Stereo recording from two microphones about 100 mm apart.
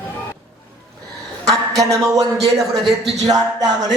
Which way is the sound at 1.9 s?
35° right (ahead or behind).